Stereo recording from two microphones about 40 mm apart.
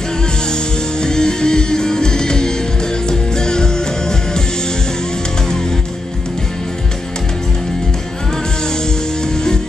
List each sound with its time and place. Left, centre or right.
1.0 s music: centre